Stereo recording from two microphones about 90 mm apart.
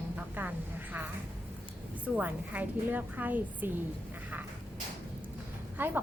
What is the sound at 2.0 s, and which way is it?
A woman's voice, 15° right (ahead or behind).